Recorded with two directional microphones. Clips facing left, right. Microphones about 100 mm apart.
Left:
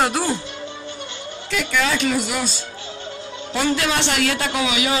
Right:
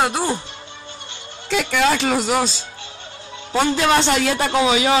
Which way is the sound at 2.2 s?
30° right (ahead or behind).